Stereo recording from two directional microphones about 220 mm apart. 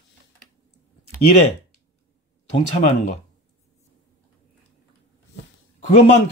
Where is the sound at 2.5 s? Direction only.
30° left (ahead or behind).